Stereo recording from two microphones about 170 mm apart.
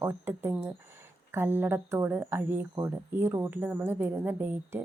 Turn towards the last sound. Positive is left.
turn(degrees=-10)  # may be behind; listen again after turning